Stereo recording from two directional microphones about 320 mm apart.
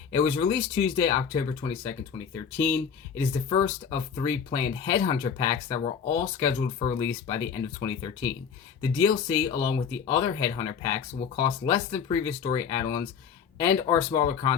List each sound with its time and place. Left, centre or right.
0.3 s speech: centre
3.8 s speech: centre